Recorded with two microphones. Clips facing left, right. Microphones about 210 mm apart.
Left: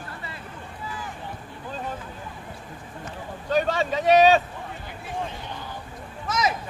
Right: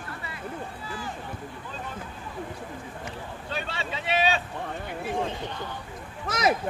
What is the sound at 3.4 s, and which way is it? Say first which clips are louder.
Vehicle: left 12 dB; 45° left (ahead or behind).